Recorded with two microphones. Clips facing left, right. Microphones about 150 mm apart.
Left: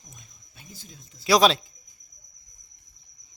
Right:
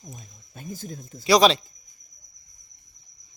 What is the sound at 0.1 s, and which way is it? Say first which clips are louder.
Speech: right 9 dB; 45° right (ahead or behind).